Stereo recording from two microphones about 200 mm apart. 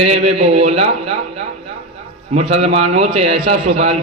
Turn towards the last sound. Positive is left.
turn(degrees=-35)  # may be behind; listen again after turning